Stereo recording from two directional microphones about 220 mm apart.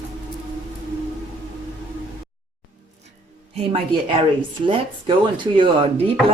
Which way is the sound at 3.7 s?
25° right (ahead or behind).